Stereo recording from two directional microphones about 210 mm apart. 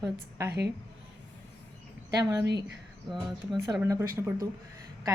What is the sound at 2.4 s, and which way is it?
Speech, 55° right (ahead or behind).